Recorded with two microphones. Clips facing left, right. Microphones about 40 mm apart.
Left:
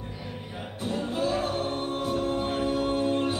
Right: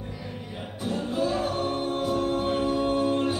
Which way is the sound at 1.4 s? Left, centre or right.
Centre.